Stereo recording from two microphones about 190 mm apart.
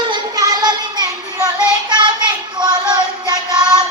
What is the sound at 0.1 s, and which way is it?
Child singing, 20° right (ahead or behind).